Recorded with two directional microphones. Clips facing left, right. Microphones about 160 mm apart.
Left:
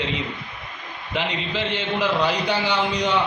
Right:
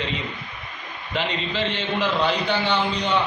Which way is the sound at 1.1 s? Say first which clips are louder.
Even; 15° left (ahead or behind).